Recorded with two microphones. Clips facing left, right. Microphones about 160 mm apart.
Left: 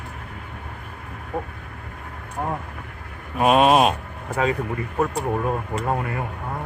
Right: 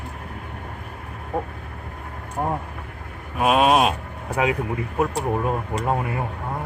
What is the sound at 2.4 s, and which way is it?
Speech, 20° right (ahead or behind).